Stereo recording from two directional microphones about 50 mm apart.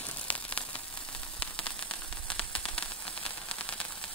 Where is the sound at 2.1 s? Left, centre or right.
Left.